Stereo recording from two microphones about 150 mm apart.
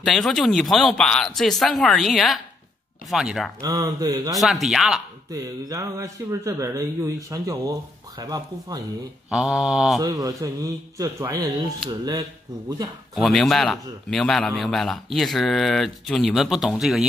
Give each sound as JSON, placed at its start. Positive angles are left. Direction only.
{"t": 0.0, "sound": "speech", "side_deg": 5}
{"t": 3.6, "sound": "speech", "side_deg": -25}
{"t": 4.4, "sound": "speech", "side_deg": 0}
{"t": 5.3, "sound": "speech", "side_deg": -20}
{"t": 9.3, "sound": "speech", "side_deg": -5}
{"t": 10.0, "sound": "speech", "side_deg": -25}
{"t": 13.1, "sound": "speech", "side_deg": 0}